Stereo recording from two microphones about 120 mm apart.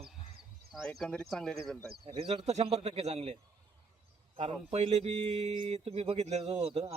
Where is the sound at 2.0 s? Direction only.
45° right (ahead or behind); by 3.4 s 65° right (ahead or behind).